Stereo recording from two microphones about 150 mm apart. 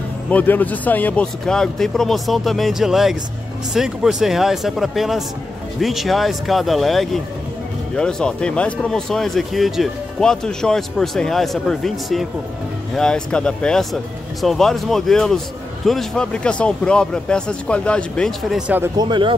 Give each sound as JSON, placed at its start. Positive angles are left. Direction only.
{"t": 0.3, "sound": "speech", "side_deg": 10}
{"t": 18.9, "sound": "speech", "side_deg": -30}